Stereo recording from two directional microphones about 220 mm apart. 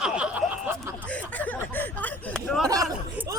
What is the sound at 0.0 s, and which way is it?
Snicker, 5° right (ahead or behind).